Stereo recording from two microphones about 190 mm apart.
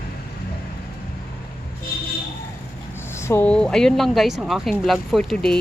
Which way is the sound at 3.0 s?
15° left (ahead or behind).